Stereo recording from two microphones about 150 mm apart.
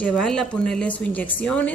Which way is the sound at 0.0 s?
5° left (ahead or behind).